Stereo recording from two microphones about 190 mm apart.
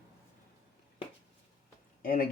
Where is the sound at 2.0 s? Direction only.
50° left (ahead or behind).